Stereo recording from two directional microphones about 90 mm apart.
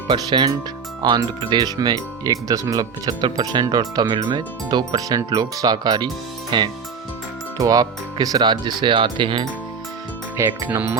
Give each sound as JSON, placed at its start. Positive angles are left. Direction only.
{"t": 0.1, "sound": "speech", "side_deg": -55}
{"t": 7.6, "sound": "speech", "side_deg": -45}
{"t": 8.8, "sound": "speech", "side_deg": -60}
{"t": 10.3, "sound": "speech", "side_deg": -30}